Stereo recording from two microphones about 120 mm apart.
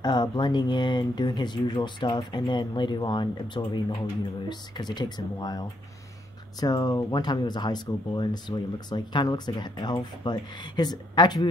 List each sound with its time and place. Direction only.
0.0 s speech: 35° left (ahead or behind)